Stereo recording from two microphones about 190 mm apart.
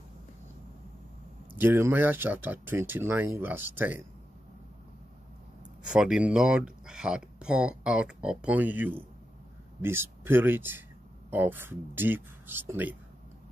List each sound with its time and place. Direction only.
1.6 s speech: 10° right (ahead or behind)
5.9 s speech: 5° right (ahead or behind)